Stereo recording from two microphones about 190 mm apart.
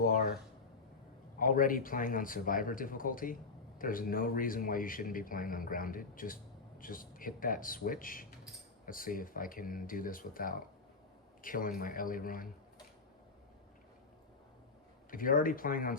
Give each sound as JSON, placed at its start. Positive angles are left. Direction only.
{"t": 0.0, "sound": "speech", "side_deg": 50}
{"t": 1.4, "sound": "a man's voice", "side_deg": 45}
{"t": 15.1, "sound": "a man's voice", "side_deg": 45}